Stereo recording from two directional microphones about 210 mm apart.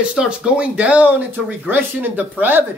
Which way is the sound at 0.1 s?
5° right (ahead or behind).